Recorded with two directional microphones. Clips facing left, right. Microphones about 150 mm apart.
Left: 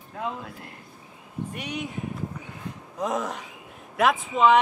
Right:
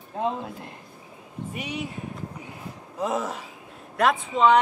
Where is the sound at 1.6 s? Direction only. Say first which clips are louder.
Right 3 dB; 5° right (ahead or behind).